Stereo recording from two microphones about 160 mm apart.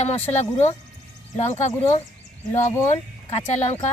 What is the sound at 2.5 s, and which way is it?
Speech, 15° left (ahead or behind).